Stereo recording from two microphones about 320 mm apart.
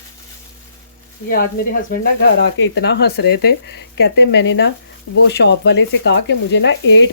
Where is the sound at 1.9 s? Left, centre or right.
Left.